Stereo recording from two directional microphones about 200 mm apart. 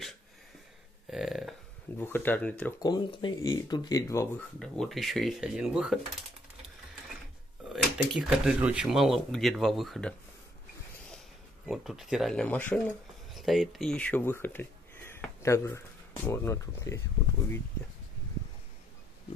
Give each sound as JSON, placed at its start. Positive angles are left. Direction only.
{"t": 1.1, "sound": "a sound", "side_deg": 0}
{"t": 2.0, "sound": "speech", "side_deg": 10}
{"t": 2.8, "sound": "speech", "side_deg": 20}
{"t": 4.6, "sound": "speech", "side_deg": 0}
{"t": 7.7, "sound": "speech", "side_deg": 0}